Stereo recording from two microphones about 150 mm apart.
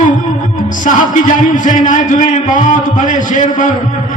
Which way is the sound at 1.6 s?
60° left (ahead or behind).